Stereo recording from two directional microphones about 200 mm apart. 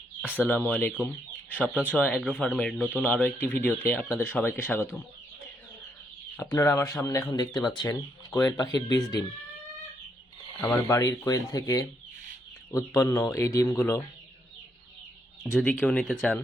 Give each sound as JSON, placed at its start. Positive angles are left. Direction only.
{"t": 0.3, "sound": "speech", "side_deg": 10}
{"t": 1.0, "sound": "chicken", "side_deg": 10}
{"t": 1.9, "sound": "speech", "side_deg": 10}
{"t": 6.3, "sound": "speech", "side_deg": 15}
{"t": 10.7, "sound": "speech", "side_deg": 15}
{"t": 15.5, "sound": "speech", "side_deg": 5}